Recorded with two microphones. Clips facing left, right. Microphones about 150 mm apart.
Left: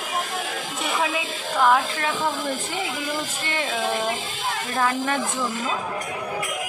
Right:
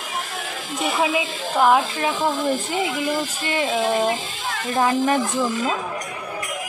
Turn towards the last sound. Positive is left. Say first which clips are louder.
# right 5 dB
turn(degrees=-20)  # may be behind; listen again after turning